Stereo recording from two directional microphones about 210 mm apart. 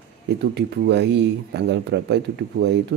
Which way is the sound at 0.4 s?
55° right (ahead or behind).